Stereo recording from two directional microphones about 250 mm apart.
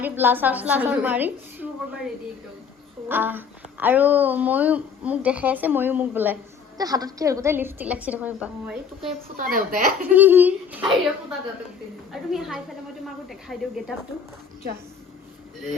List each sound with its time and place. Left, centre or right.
0.0 s speech: centre
3.1 s speech: centre
9.4 s a woman's voice: right
10.2 s speech: centre
12.1 s speech: centre